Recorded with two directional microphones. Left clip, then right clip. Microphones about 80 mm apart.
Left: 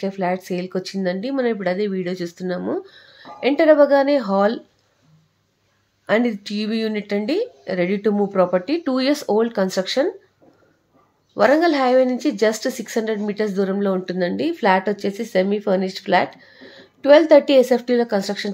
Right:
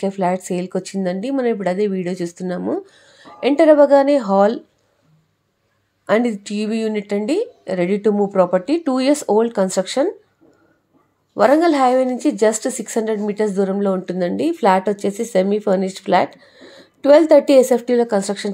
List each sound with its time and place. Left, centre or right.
0.0 s a woman's voice: right
6.0 s speech: right
11.3 s a woman's voice: right